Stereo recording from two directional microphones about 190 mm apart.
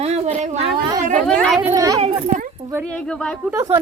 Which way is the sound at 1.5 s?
20° right (ahead or behind).